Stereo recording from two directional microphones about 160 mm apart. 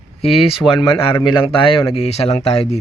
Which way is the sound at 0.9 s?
35° left (ahead or behind).